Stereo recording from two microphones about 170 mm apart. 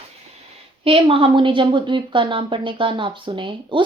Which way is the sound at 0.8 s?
30° right (ahead or behind).